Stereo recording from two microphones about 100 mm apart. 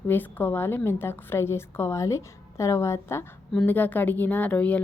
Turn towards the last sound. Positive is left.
turn(degrees=15)  # may be behind; listen again after turning